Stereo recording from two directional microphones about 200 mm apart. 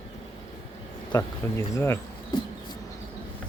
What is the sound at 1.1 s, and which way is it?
Speech, 20° left (ahead or behind).